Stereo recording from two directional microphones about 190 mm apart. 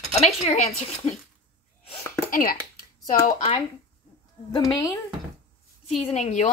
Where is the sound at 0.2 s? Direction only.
35° left (ahead or behind).